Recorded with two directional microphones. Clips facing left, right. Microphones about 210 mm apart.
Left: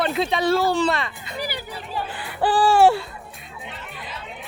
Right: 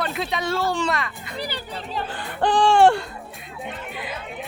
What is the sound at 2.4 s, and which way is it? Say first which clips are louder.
Speech: even; 5° left (ahead or behind).